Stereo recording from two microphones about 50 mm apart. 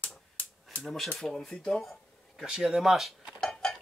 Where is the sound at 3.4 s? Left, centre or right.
Centre.